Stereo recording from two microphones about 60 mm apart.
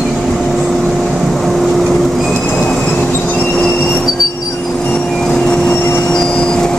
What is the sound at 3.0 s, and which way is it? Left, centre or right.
Train, left.